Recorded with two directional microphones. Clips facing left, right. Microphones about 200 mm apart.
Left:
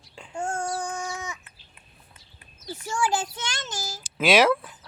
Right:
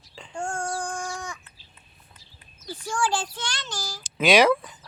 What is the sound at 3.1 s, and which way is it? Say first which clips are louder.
Child singing: left 1 dB; 20° left (ahead or behind).